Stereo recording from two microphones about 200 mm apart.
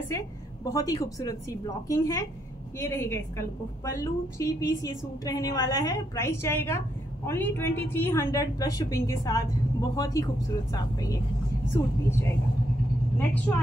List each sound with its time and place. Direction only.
0.7 s a woman's voice: 15° left (ahead or behind)
13.5 s a woman's voice: 10° left (ahead or behind)